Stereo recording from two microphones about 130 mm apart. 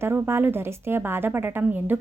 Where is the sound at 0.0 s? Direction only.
20° right (ahead or behind).